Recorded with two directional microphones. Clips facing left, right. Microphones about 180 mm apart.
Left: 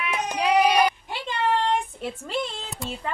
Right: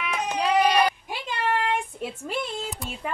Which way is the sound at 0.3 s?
15° left (ahead or behind).